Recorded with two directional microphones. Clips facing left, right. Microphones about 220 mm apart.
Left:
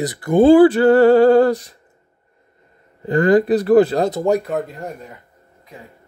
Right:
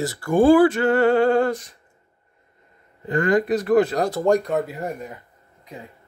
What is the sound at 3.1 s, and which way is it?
Speech, 35° left (ahead or behind).